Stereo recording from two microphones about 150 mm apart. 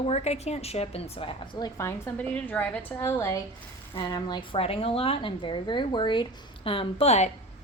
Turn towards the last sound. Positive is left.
turn(degrees=45)  # may be behind; listen again after turning